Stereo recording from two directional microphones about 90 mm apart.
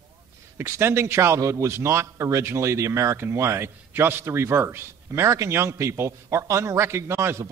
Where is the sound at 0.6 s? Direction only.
30° right (ahead or behind).